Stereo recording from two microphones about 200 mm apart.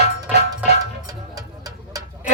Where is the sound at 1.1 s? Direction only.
20° right (ahead or behind).